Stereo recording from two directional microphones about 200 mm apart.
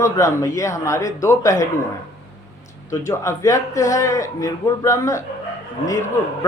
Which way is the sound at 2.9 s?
15° left (ahead or behind).